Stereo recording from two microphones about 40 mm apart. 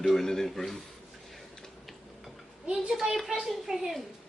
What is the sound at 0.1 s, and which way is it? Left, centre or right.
Speech, centre.